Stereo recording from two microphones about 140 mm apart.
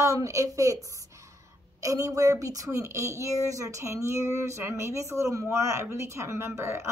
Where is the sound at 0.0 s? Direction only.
20° right (ahead or behind).